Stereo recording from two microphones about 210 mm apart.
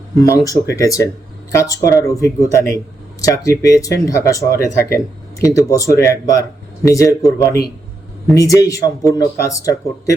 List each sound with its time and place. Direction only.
0.3 s speech: 15° left (ahead or behind)